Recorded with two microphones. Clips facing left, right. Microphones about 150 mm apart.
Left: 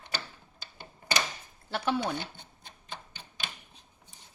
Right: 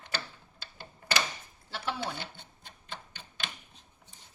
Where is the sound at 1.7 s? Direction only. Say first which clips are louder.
Left 6 dB; 60° left (ahead or behind).